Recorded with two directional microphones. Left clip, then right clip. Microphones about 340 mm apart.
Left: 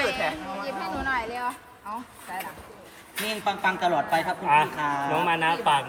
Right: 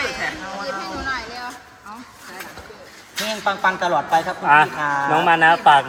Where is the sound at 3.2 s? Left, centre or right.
Centre.